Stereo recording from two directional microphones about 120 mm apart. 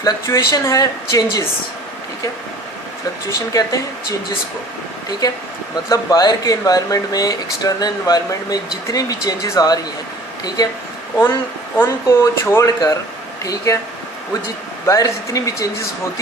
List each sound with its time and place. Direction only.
0.0 s speech: 30° left (ahead or behind)
3.2 s speech: 30° left (ahead or behind)
5.7 s speech: 30° left (ahead or behind)
11.8 s speech: 20° left (ahead or behind)
14.8 s speech: 25° left (ahead or behind)